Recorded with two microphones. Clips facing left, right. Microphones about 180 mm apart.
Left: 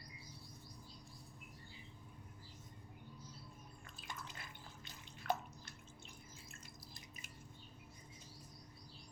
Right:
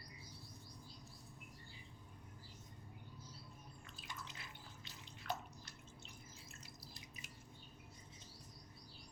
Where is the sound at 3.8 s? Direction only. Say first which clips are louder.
Left 2 dB; 50° left (ahead or behind).